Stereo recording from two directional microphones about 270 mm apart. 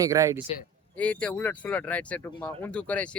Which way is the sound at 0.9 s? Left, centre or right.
Centre.